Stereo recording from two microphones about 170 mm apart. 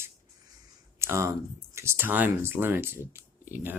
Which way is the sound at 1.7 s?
15° right (ahead or behind).